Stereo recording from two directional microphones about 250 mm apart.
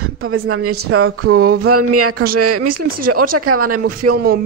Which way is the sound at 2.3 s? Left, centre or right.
Right.